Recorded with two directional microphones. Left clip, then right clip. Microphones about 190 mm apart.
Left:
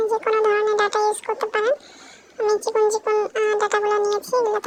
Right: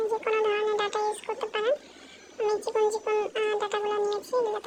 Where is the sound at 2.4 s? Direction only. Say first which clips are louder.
Left 7 dB; 10° left (ahead or behind).